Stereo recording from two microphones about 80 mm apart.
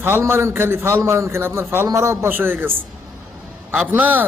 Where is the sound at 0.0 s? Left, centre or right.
Right.